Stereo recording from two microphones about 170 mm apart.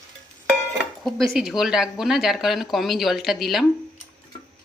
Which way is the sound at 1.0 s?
Centre (ahead or behind).